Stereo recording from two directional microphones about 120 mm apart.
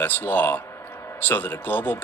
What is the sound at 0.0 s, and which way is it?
Speech, 15° left (ahead or behind).